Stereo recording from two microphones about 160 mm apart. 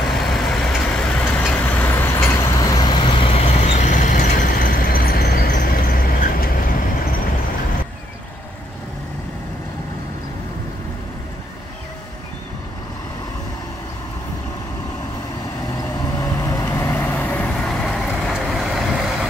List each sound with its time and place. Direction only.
0.1 s vehicle: centre (ahead or behind); by 6.7 s 65° left (ahead or behind)
16.2 s vehicle: 20° left (ahead or behind); by 19.2 s centre (ahead or behind)